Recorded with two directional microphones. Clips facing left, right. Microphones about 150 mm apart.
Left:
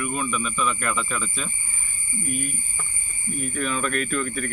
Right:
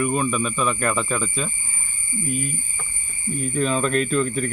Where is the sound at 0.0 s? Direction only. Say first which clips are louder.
Right 5 dB; 35° right (ahead or behind).